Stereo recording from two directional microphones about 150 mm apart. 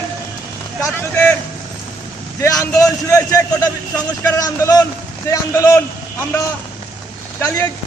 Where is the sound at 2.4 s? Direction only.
20° left (ahead or behind).